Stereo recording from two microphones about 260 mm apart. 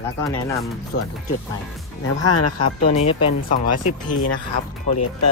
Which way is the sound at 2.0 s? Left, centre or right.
Left.